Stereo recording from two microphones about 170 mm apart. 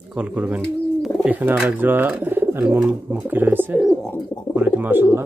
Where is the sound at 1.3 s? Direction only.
5° right (ahead or behind).